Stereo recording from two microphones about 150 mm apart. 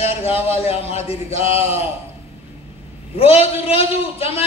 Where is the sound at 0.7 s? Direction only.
40° left (ahead or behind).